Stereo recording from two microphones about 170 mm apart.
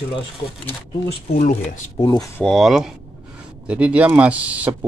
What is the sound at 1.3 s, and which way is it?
Speech, 45° left (ahead or behind).